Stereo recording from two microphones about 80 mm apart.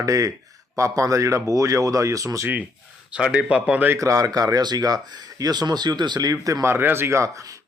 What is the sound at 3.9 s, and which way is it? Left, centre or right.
A man's voice, right.